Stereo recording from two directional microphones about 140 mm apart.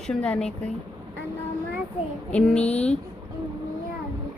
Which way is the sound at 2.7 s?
50° left (ahead or behind).